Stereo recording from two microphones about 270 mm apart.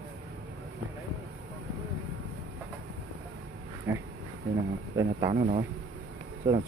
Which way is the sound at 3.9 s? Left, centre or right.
Centre.